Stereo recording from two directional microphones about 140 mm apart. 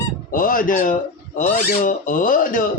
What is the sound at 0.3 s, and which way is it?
Speech, 75° left (ahead or behind).